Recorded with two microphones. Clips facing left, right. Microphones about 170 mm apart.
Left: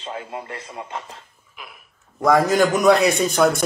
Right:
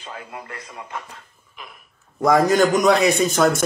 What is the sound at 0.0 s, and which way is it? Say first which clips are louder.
A man's voice: left 4 dB; 25° left (ahead or behind).